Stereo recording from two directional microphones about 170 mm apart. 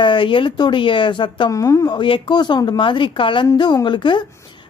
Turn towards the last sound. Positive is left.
turn(degrees=30)  # may be behind; listen again after turning